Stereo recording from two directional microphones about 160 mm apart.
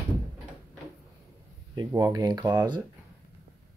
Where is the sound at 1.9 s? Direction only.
20° right (ahead or behind).